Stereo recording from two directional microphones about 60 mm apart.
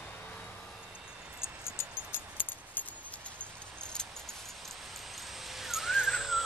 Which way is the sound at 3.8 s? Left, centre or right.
Centre.